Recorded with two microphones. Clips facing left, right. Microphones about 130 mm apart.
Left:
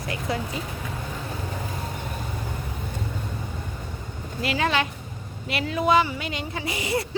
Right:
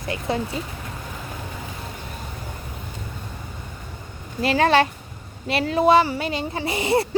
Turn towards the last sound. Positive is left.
turn(degrees=-25)  # may be behind; listen again after turning